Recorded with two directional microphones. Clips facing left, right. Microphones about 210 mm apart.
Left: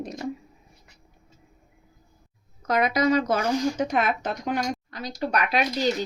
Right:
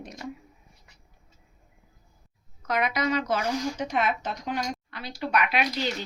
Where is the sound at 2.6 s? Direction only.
40° left (ahead or behind).